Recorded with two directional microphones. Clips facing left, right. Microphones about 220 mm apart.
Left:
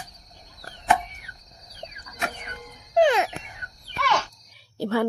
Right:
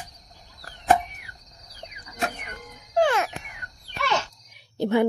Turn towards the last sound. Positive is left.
turn(degrees=-20)  # may be behind; listen again after turning